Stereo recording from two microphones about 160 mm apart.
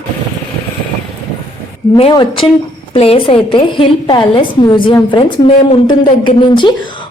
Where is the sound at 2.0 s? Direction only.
35° left (ahead or behind).